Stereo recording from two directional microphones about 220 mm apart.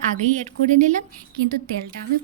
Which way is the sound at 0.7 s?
35° right (ahead or behind).